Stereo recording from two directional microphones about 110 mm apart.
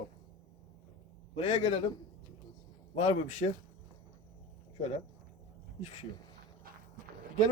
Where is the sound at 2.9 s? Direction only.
80° left.